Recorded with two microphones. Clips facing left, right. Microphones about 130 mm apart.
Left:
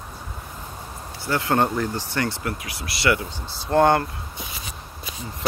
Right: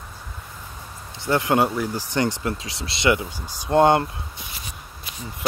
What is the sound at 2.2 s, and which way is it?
Speech, 20° right (ahead or behind).